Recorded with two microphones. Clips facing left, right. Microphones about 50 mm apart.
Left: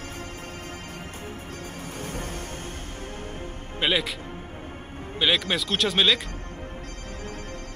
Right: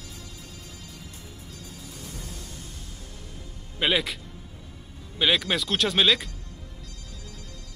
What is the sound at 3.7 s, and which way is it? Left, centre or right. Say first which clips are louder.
Speech: even; centre.